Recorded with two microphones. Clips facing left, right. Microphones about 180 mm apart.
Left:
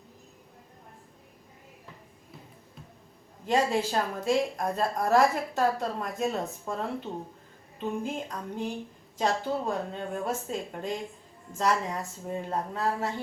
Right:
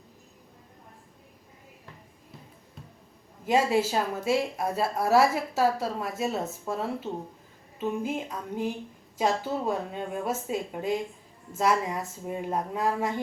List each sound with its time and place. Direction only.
3.4 s a woman's voice: 10° right (ahead or behind)